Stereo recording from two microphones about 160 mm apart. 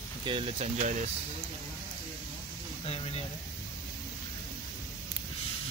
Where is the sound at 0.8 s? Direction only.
50° right (ahead or behind).